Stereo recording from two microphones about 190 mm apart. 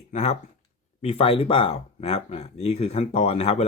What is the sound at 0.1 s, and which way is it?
Speech, 35° left (ahead or behind).